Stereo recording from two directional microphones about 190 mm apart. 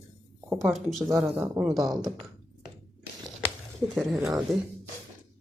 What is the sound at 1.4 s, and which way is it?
Speech, 15° right (ahead or behind).